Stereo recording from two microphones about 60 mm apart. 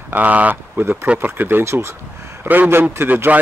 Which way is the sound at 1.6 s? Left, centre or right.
Right.